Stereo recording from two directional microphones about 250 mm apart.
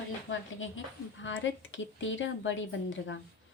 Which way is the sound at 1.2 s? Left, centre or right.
Left.